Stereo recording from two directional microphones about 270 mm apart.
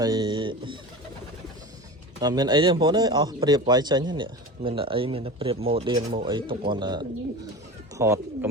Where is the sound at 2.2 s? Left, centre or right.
Centre.